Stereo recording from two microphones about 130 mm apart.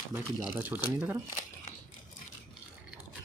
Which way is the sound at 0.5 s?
15° right (ahead or behind).